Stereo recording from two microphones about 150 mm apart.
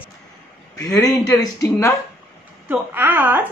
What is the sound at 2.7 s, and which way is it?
Speech, 10° right (ahead or behind).